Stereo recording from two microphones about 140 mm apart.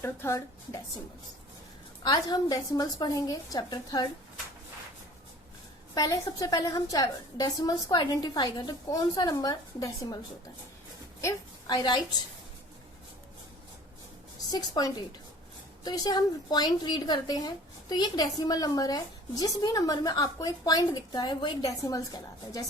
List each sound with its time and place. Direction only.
0.0 s a woman's voice: 20° left (ahead or behind)
2.0 s a woman's voice: 30° left (ahead or behind)
5.9 s a woman's voice: 25° left (ahead or behind)
11.2 s a woman's voice: 25° left (ahead or behind)
14.5 s a woman's voice: 25° left (ahead or behind)